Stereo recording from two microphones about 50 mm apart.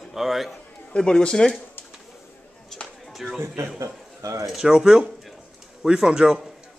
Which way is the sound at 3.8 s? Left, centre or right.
Right.